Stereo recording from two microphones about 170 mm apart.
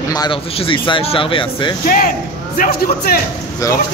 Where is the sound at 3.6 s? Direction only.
20° left (ahead or behind).